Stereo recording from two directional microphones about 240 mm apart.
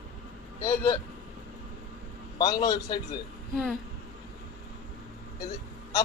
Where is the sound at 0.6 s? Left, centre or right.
Centre.